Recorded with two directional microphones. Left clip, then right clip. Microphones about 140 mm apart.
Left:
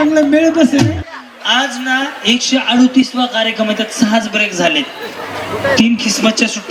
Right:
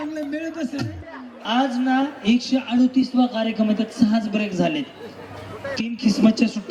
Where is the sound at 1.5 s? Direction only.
15° left (ahead or behind).